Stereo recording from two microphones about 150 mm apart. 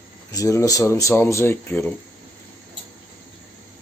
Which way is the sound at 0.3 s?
20° left (ahead or behind).